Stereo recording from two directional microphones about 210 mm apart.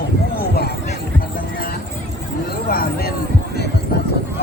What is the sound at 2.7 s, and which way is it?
Speech, 45° left (ahead or behind).